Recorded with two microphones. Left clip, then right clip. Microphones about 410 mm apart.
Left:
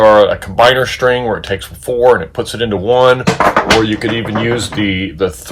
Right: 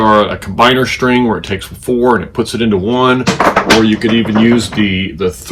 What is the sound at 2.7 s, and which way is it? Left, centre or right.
Speech, centre.